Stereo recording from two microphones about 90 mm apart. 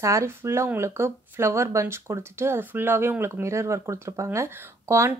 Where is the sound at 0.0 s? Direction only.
35° right (ahead or behind).